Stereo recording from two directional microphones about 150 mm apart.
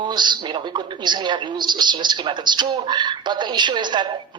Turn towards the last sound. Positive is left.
turn(degrees=-30)  # may be behind; listen again after turning